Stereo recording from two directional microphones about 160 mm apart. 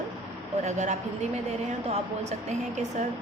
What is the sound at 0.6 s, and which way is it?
Speech, 45° right (ahead or behind).